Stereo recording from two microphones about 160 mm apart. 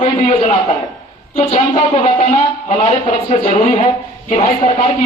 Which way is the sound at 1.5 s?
35° left (ahead or behind).